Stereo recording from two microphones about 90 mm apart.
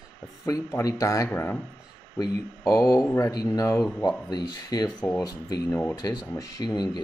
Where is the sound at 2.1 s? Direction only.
40° left (ahead or behind).